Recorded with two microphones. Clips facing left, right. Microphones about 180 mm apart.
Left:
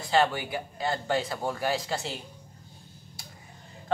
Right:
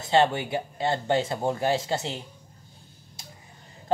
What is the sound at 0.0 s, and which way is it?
A woman's voice, 25° right (ahead or behind).